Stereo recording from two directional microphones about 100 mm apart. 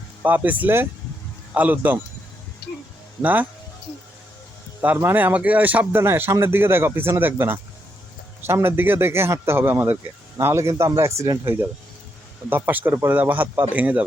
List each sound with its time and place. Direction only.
0.2 s speech: 20° right (ahead or behind)
3.2 s speech: 15° right (ahead or behind)
4.8 s speech: 20° right (ahead or behind)